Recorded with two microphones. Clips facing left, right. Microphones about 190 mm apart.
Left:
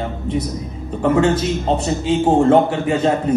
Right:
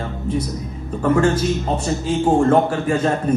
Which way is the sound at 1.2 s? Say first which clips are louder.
Left 1 dB; 20° left (ahead or behind).